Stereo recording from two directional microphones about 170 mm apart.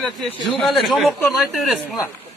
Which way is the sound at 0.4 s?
Centre (ahead or behind).